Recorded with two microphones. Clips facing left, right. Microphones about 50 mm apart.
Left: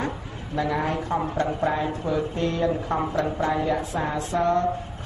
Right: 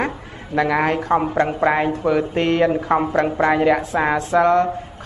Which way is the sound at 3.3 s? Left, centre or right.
Right.